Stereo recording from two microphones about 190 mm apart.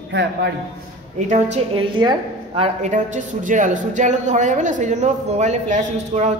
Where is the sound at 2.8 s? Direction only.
40° right (ahead or behind).